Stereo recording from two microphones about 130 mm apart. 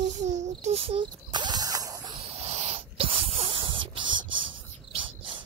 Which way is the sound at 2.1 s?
50° right (ahead or behind).